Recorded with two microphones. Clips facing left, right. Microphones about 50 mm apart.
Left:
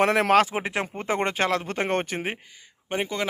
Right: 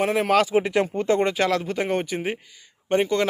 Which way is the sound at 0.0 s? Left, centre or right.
Left.